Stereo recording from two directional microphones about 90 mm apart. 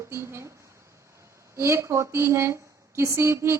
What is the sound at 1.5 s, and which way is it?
Speech, 30° right (ahead or behind).